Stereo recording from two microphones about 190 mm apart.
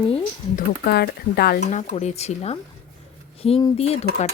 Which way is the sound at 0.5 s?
60° left (ahead or behind).